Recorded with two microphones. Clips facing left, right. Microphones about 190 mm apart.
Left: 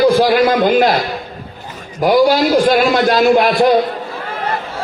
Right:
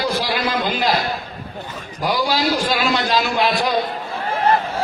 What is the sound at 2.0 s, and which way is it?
A man's voice, 50° left (ahead or behind).